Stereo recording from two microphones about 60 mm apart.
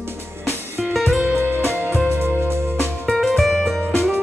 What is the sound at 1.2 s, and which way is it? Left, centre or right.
Music, right.